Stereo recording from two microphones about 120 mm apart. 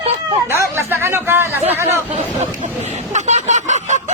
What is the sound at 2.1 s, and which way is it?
Speech, 70° right (ahead or behind).